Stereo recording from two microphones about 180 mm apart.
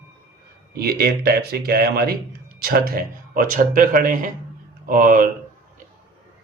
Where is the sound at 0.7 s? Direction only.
60° right (ahead or behind).